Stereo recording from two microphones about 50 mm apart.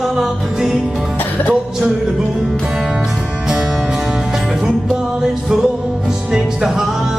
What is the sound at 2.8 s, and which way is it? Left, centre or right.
Music, centre.